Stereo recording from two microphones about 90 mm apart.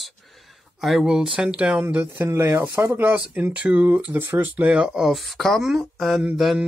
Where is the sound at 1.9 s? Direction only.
25° right (ahead or behind).